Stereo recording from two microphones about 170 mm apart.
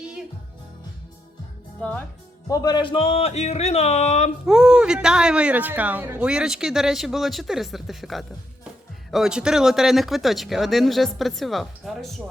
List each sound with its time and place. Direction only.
1.8 s speech: 10° left (ahead or behind)
2.5 s speech: 20° left (ahead or behind); by 4.3 s 40° left (ahead or behind)
4.4 s speech: 5° right (ahead or behind)